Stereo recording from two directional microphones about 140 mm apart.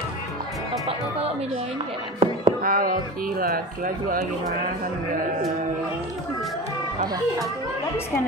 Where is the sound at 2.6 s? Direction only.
90° right.